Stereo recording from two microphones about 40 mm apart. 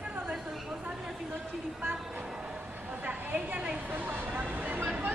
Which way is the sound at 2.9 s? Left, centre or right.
Right.